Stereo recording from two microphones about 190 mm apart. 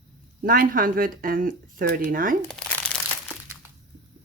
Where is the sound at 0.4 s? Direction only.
50° right (ahead or behind).